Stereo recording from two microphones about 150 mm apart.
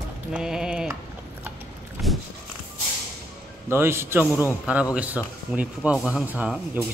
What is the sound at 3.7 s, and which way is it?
Speech, 15° right (ahead or behind).